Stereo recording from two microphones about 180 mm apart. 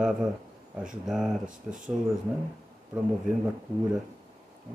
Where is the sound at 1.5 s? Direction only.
45° right (ahead or behind).